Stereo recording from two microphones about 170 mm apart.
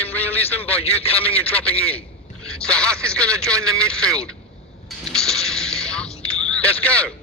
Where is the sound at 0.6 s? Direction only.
35° left (ahead or behind).